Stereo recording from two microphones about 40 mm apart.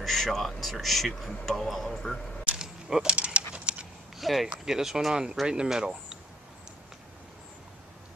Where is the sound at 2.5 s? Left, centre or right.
Centre.